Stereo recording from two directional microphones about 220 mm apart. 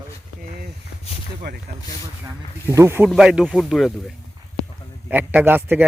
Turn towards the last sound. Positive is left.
turn(degrees=-10)  # may be behind; listen again after turning